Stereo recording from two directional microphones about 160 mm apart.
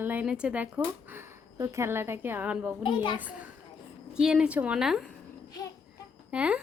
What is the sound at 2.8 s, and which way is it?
Speech, 30° left (ahead or behind).